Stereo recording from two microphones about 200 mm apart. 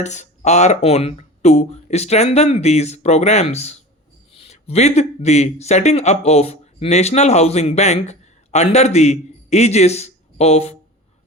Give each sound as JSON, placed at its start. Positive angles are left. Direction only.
{"t": 0.0, "sound": "speech", "side_deg": 35}